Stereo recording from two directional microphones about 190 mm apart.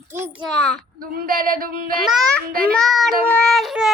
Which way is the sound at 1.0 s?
50° right (ahead or behind).